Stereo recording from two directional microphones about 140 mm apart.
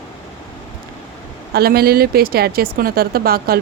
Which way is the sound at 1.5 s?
90° right.